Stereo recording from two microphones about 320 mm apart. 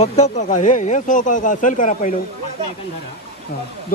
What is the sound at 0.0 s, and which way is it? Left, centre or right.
Speech, left.